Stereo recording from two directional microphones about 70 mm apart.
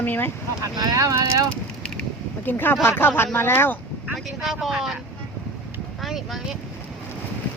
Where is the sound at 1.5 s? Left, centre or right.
Centre.